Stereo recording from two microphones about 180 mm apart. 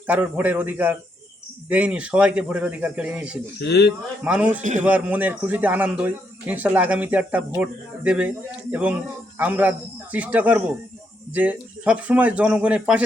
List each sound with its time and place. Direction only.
0.1 s speech: 10° right (ahead or behind)
3.6 s speech: 65° left (ahead or behind)
4.2 s speech: 5° right (ahead or behind)